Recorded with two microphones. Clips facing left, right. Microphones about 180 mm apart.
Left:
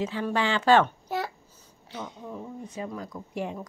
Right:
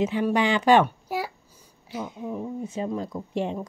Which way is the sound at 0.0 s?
15° right (ahead or behind).